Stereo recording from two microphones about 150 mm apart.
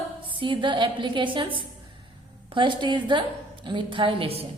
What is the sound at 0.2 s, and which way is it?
A woman's voice, 35° right (ahead or behind).